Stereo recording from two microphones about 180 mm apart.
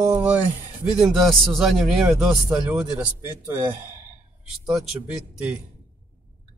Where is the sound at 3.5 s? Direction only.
10° right (ahead or behind).